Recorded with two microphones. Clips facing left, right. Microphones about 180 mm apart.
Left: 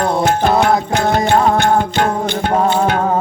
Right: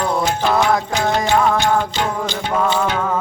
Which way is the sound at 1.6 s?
55° left (ahead or behind).